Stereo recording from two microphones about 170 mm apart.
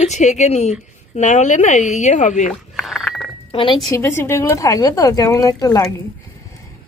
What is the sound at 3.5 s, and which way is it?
Speech, 30° left (ahead or behind).